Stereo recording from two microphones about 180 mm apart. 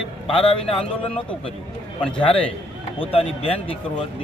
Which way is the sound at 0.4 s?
30° left (ahead or behind).